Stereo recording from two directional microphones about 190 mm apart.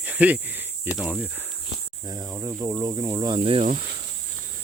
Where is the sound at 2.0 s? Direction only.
20° right (ahead or behind).